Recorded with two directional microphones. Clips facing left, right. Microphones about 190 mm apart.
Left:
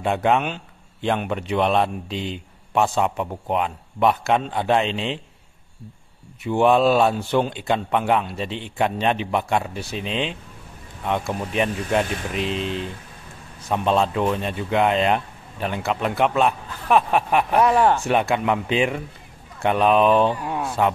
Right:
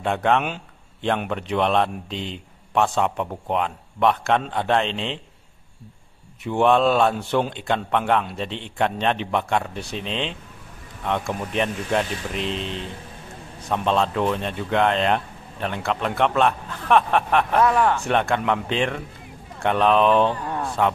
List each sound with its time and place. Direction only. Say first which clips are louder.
0.0 s a man's voice: left 1 dB; 5° left (ahead or behind)
6.4 s a man's voice: left 1 dB; 5° left (ahead or behind)
17.7 s speech: left 2 dB; 30° left (ahead or behind)
18.0 s speech: left 1 dB; 5° left (ahead or behind)